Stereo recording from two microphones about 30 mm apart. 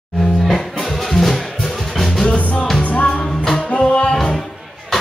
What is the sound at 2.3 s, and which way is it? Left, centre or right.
Music, left.